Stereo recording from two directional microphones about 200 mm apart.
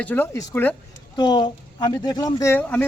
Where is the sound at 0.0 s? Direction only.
10° left (ahead or behind).